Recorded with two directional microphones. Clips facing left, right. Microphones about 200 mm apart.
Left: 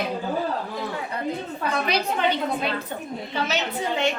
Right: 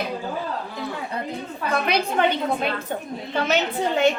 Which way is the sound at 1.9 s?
55° right (ahead or behind).